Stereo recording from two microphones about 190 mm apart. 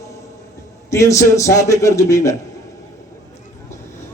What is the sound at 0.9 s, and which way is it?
A man's voice, 15° left (ahead or behind).